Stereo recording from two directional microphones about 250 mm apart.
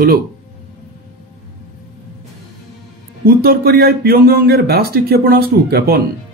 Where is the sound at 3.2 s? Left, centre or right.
Right.